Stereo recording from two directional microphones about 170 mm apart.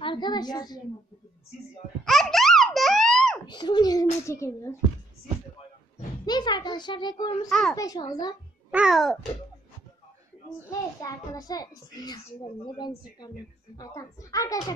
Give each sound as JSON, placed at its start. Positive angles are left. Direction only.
{"t": 0.0, "sound": "a woman's voice", "side_deg": 25}
{"t": 2.0, "sound": "baby laughter", "side_deg": 0}
{"t": 3.4, "sound": "a child's voice", "side_deg": 25}
{"t": 6.2, "sound": "a child's voice", "side_deg": 25}
{"t": 7.4, "sound": "a child's voice", "side_deg": 0}
{"t": 7.7, "sound": "a child's voice", "side_deg": 20}
{"t": 8.6, "sound": "babbling", "side_deg": -5}
{"t": 10.7, "sound": "a child's voice", "side_deg": 20}